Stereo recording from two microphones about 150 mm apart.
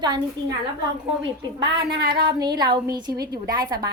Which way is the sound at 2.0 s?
90° right.